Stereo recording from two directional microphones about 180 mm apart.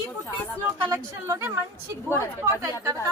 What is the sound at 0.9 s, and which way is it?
Speech, 15° right (ahead or behind).